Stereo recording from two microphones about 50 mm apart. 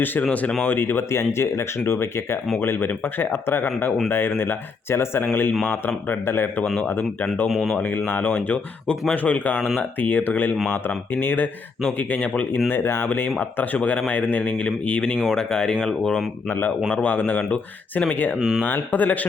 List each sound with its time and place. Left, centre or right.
0.0 s speech: left
2.6 s speech: left
7.5 s speech: centre
7.8 s speech: left
12.5 s speech: left
13.7 s speech: left
16.5 s speech: left
16.9 s speech: left
18.3 s speech: centre
18.6 s speech: left